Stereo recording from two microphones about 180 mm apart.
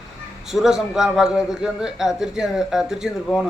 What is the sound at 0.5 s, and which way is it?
A man's voice, centre (ahead or behind).